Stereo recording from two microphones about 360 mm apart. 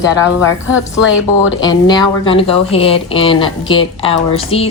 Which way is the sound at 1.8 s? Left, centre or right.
Centre.